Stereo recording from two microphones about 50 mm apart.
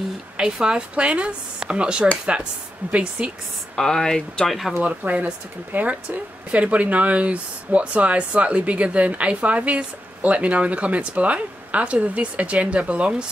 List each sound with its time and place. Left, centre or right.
0.4 s speech: centre
2.8 s speech: right
3.2 s speech: right
3.7 s speech: centre
4.8 s speech: right